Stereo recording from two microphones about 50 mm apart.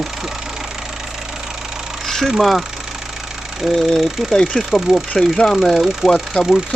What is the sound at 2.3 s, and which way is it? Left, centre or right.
Speech, centre.